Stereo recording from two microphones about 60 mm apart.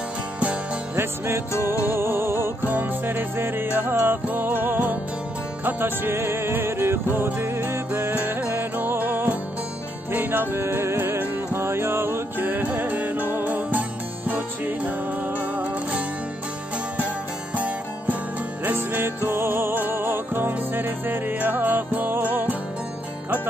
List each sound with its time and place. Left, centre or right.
0.9 s music: right
2.6 s music: right
17.6 s music: right